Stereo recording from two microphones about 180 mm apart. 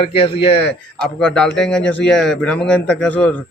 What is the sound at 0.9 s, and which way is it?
A man's voice, 5° left (ahead or behind).